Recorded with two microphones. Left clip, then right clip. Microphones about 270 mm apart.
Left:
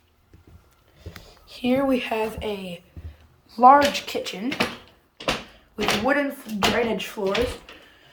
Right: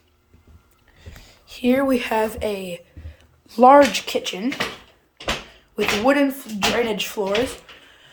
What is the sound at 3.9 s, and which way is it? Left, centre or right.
Speech, centre.